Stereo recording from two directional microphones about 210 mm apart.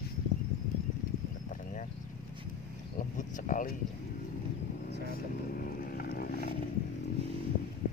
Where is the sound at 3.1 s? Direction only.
40° left (ahead or behind).